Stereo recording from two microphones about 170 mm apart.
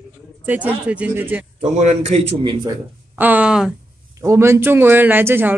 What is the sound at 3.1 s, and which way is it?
Speech, 10° right (ahead or behind).